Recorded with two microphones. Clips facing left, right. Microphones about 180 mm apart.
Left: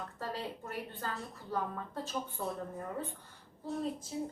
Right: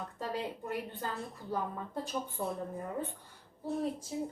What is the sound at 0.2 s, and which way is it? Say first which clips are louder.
A woman's voice: right 3 dB; 15° right (ahead or behind).